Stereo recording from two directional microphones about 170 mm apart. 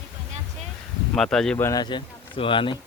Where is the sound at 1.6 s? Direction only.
25° left (ahead or behind).